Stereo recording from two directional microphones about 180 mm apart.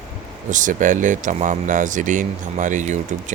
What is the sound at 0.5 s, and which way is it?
Speech, 45° right (ahead or behind).